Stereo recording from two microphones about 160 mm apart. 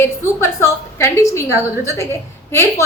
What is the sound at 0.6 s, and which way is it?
A woman's voice, 15° left (ahead or behind).